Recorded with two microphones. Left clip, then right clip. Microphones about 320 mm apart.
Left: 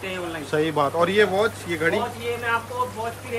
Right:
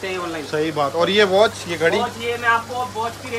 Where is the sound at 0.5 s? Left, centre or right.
Centre.